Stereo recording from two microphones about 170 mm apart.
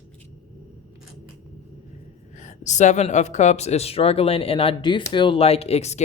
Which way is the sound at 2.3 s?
45° left (ahead or behind).